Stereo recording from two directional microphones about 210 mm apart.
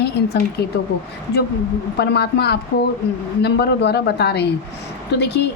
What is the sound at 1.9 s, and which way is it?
A woman's voice, 50° left (ahead or behind).